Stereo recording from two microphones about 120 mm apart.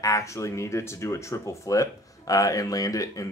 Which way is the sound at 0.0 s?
25° left (ahead or behind).